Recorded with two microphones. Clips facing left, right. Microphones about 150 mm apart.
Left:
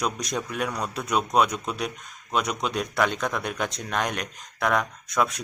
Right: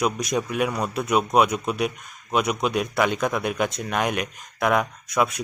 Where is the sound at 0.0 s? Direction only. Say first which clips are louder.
Right 5 dB; 10° right (ahead or behind).